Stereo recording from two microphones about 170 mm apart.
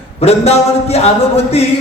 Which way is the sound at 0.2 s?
40° left (ahead or behind).